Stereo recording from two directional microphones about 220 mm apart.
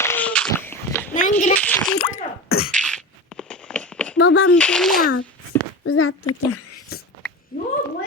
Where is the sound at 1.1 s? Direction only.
35° left (ahead or behind).